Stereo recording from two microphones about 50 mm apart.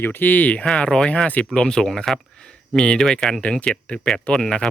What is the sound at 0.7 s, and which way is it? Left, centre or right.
Speech, centre.